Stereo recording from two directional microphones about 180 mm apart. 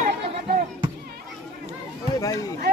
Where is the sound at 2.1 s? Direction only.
20° left (ahead or behind).